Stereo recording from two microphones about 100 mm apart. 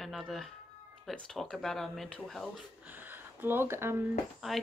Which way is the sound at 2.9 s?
20° right (ahead or behind).